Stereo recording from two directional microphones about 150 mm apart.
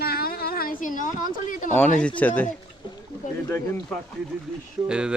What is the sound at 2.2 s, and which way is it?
Speech, 10° left (ahead or behind).